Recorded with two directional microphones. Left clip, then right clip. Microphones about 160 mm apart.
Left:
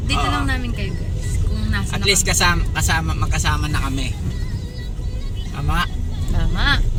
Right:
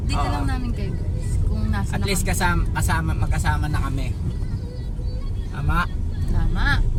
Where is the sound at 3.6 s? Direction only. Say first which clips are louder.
Left 4 dB; 25° right (ahead or behind).